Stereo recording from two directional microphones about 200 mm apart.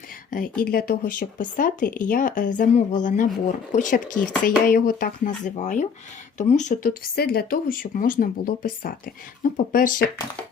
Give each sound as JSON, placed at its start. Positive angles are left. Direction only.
{"t": 0.3, "sound": "speech", "side_deg": 45}